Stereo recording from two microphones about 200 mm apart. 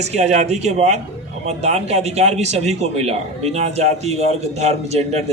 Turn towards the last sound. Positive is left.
turn(degrees=-35)  # may be behind; listen again after turning